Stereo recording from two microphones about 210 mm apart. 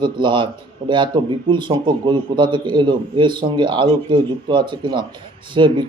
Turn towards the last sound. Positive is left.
turn(degrees=-20)  # may be behind; listen again after turning